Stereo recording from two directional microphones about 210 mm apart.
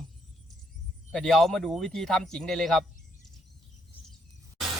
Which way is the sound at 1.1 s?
5° left (ahead or behind).